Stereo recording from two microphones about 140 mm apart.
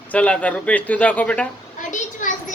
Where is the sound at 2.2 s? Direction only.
65° left (ahead or behind).